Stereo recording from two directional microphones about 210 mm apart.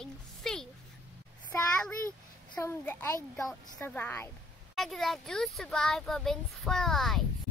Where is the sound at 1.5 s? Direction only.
5° left (ahead or behind).